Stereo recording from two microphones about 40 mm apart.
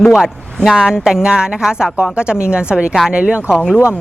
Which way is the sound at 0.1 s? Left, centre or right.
Centre.